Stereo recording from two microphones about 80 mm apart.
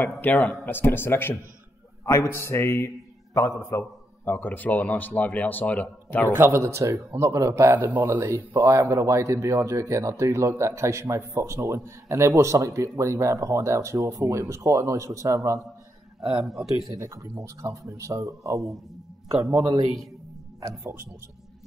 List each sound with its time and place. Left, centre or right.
0.0 s a man's voice: left
4.3 s speech: left
6.3 s a man's voice: right
7.7 s speech: right
8.7 s a man's voice: right
16.2 s speech: centre
17.0 s a man's voice: right